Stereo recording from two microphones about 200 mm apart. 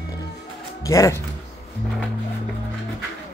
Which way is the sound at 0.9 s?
15° left (ahead or behind).